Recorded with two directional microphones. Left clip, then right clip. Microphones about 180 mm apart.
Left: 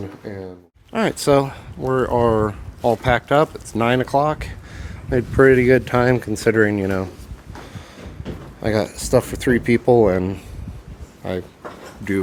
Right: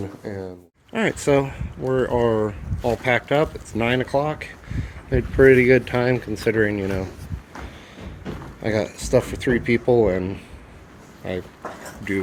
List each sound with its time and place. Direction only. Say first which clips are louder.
0.2 s speech: right 1 dB; 5° left (ahead or behind)
0.9 s speech: left 3 dB; 30° left (ahead or behind)
8.6 s speech: left 3 dB; 35° left (ahead or behind)